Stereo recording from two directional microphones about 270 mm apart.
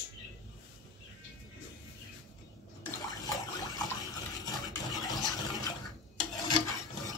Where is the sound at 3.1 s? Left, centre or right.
Centre.